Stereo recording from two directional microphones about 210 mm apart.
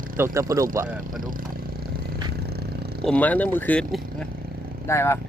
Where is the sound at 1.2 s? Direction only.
40° right (ahead or behind).